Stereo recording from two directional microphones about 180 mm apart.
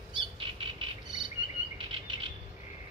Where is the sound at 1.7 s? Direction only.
30° right (ahead or behind).